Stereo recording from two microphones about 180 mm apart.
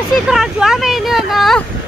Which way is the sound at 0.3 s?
Centre (ahead or behind).